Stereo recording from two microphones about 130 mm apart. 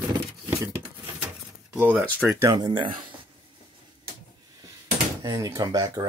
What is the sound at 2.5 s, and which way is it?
Speech, 35° right (ahead or behind).